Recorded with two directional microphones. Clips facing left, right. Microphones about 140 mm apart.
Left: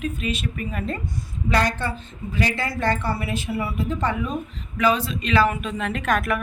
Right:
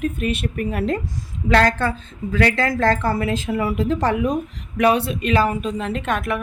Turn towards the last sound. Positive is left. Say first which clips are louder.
# even
turn(degrees=-25)  # may be behind; listen again after turning